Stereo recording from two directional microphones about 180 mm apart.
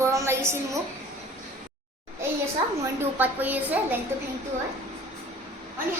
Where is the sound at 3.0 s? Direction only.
10° right (ahead or behind).